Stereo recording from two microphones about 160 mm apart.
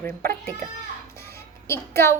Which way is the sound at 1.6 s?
15° left (ahead or behind).